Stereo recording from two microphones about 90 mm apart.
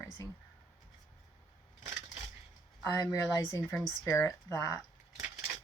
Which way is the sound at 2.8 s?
45° left (ahead or behind).